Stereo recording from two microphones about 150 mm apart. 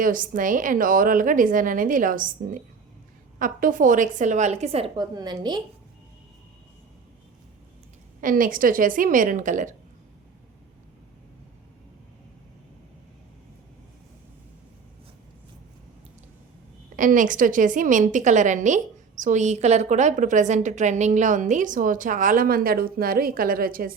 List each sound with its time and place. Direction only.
0.0 s a woman's voice: 65° right (ahead or behind); by 4.9 s 45° right (ahead or behind)
4.9 s a woman's voice: 30° right (ahead or behind)
8.2 s a woman's voice: 65° right (ahead or behind)
17.0 s a woman's voice: 60° right (ahead or behind)